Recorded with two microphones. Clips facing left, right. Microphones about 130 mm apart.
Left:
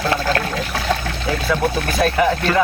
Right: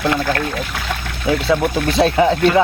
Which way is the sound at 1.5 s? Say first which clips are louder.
Right 1 dB; 25° right (ahead or behind).